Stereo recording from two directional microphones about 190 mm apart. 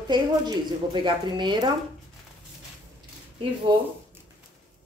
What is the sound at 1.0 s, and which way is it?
Speech, 25° right (ahead or behind).